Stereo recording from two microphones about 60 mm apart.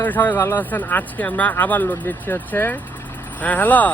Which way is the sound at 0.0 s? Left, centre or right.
Left.